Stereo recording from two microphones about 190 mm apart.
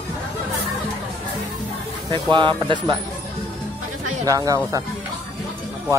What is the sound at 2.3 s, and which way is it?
Speech, 25° right (ahead or behind).